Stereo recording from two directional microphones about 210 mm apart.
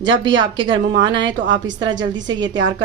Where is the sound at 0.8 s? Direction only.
60° right (ahead or behind).